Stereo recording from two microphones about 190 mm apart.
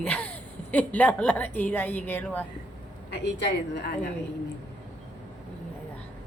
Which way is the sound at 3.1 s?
60° left (ahead or behind).